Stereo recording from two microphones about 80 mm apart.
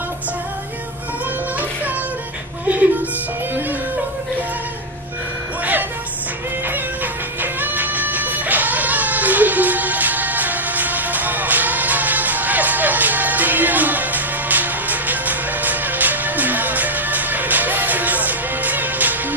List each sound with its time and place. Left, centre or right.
2.6 s music: centre
7.6 s music: right